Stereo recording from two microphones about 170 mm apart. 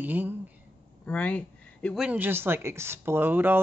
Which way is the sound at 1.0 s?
10° left (ahead or behind).